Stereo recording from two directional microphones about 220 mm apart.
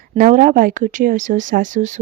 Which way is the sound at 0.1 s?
35° right (ahead or behind).